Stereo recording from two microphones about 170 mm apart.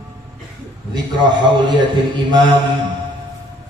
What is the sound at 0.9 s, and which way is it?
A man's voice, 25° right (ahead or behind).